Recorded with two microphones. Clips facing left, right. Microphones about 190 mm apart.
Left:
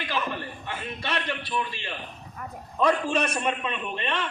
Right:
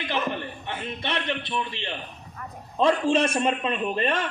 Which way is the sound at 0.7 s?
20° right (ahead or behind).